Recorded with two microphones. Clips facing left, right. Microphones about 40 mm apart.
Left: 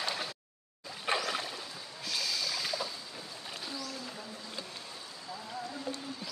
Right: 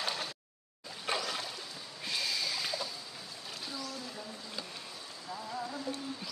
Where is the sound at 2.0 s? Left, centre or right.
Right.